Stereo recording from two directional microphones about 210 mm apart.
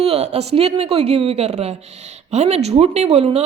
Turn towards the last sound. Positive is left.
turn(degrees=-30)  # may be behind; listen again after turning